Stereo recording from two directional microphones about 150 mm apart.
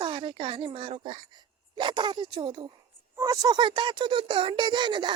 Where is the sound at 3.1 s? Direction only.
20° right (ahead or behind).